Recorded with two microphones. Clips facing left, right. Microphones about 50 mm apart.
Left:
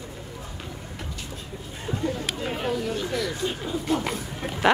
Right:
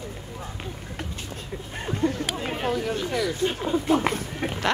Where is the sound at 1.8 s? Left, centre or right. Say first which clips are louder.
Right 4 dB; right.